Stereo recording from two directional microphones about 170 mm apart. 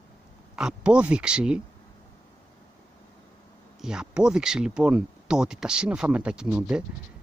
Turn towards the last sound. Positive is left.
turn(degrees=-5)  # may be behind; listen again after turning